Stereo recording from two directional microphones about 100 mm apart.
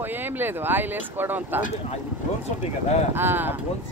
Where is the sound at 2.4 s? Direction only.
90° left.